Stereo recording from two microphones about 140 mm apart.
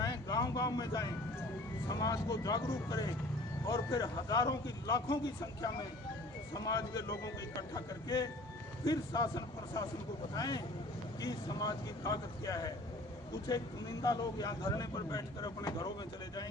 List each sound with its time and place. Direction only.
0.0 s a sound: 25° left (ahead or behind)
1.9 s a man's voice: 25° left (ahead or behind)
14.0 s a man's voice: 25° left (ahead or behind)